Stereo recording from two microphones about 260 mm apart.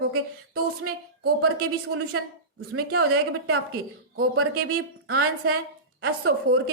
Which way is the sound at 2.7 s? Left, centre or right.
Right.